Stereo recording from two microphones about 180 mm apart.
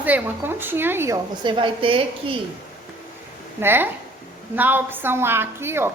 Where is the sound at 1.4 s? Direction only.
30° right (ahead or behind).